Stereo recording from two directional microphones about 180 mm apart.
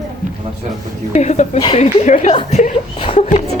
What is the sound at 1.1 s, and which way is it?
Speech, 40° left (ahead or behind).